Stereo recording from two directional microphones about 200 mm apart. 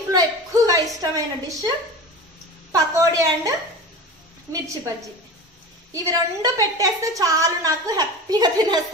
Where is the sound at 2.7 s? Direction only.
15° right (ahead or behind).